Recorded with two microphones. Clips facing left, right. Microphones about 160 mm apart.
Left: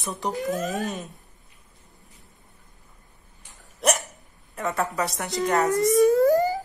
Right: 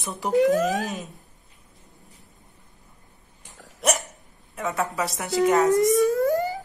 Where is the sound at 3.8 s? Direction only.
Centre (ahead or behind).